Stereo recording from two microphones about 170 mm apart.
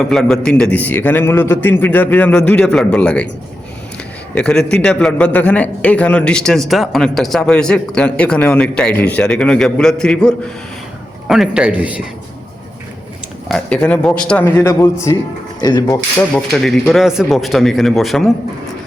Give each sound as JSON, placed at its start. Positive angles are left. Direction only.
{"t": 0.0, "sound": "a man's voice", "side_deg": 0}
{"t": 4.4, "sound": "a man's voice", "side_deg": 5}
{"t": 13.5, "sound": "a man's voice", "side_deg": 5}
{"t": 16.3, "sound": "a man's voice", "side_deg": 5}